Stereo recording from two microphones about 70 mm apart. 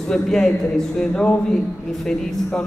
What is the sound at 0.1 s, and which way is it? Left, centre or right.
Speech, centre.